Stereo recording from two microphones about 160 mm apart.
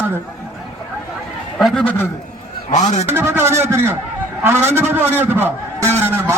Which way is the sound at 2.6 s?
45° left (ahead or behind).